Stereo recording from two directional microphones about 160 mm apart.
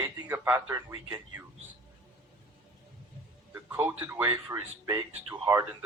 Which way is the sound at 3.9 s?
15° right (ahead or behind).